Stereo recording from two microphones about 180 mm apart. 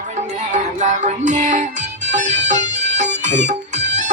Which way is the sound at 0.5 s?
40° right (ahead or behind).